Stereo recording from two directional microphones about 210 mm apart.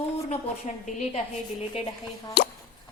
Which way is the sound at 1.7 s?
20° left (ahead or behind).